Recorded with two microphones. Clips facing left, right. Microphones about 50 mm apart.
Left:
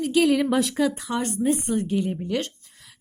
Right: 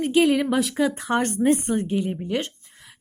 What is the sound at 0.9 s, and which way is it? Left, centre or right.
Speech, right.